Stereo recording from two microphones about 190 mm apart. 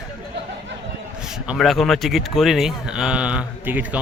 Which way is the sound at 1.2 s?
5° right (ahead or behind).